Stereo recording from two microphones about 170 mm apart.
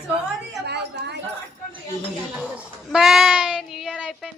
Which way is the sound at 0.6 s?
80° right.